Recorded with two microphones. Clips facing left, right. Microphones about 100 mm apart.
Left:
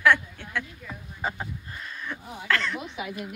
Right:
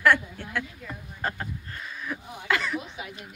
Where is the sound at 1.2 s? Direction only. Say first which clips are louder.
Even; 10° left (ahead or behind).